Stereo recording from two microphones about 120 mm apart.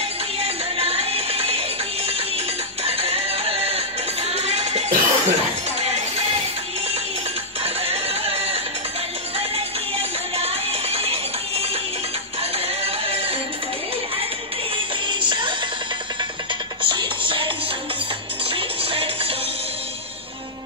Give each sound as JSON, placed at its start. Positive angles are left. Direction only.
{"t": 0.4, "sound": "music", "side_deg": -55}
{"t": 7.6, "sound": "a sound", "side_deg": -60}
{"t": 10.3, "sound": "music", "side_deg": -55}
{"t": 15.0, "sound": "music", "side_deg": -40}
{"t": 16.8, "sound": "music", "side_deg": -40}
{"t": 18.5, "sound": "music", "side_deg": -55}